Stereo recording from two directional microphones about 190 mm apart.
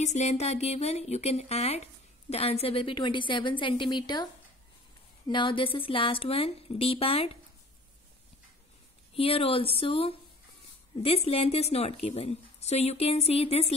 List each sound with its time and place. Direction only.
0.0 s speech: 35° left (ahead or behind); by 4.3 s 20° left (ahead or behind)
5.3 s speech: 25° left (ahead or behind)
9.1 s speech: 30° left (ahead or behind)